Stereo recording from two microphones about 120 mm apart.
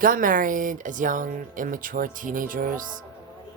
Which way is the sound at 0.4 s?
90° right.